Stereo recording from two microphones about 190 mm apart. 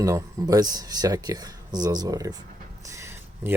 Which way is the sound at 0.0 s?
20° right (ahead or behind).